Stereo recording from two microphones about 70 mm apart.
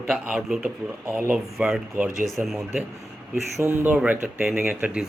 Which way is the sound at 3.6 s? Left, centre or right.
Right.